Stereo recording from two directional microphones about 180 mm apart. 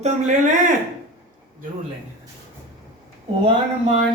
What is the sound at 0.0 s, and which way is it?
Speech, 45° right (ahead or behind).